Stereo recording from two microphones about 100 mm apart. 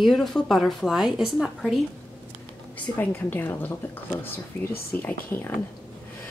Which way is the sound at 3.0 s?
20° left (ahead or behind).